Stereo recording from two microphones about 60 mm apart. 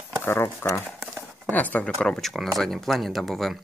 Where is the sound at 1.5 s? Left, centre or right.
Left.